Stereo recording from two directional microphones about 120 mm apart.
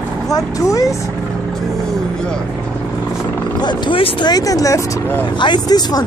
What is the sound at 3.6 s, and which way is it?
Speech, 40° left (ahead or behind).